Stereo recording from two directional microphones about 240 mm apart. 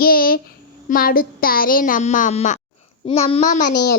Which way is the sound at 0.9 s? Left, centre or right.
Left.